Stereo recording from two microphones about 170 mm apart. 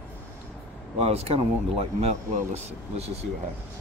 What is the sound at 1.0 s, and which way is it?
Speech, 35° right (ahead or behind).